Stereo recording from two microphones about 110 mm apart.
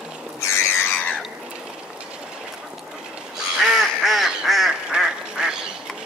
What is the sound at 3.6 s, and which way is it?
Duck, centre (ahead or behind).